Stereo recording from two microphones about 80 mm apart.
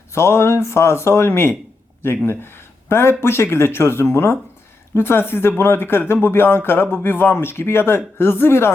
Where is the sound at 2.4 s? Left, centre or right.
Left.